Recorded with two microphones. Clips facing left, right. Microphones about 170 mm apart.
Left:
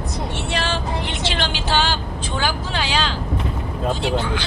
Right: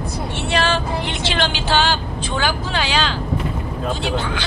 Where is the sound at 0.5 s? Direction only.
70° right (ahead or behind).